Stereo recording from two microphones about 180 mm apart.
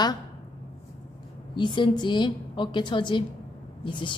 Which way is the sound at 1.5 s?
25° left (ahead or behind).